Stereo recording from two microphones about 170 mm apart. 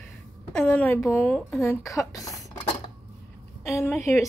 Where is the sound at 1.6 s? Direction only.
15° left (ahead or behind).